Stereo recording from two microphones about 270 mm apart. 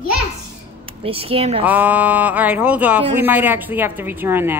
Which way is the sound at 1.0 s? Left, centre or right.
Right.